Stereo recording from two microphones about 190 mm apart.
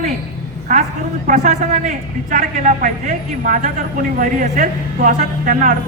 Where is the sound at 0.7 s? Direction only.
40° right (ahead or behind).